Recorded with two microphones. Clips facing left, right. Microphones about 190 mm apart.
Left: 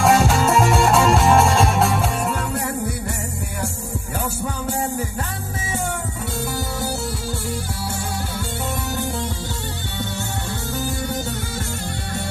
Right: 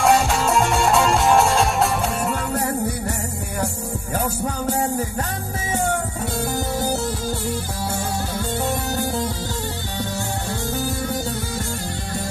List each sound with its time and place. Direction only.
0.0 s music: centre (ahead or behind)
8.9 s music: 40° right (ahead or behind)